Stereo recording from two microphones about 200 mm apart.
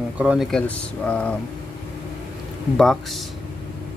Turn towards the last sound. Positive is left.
turn(degrees=0)  # may be behind; listen again after turning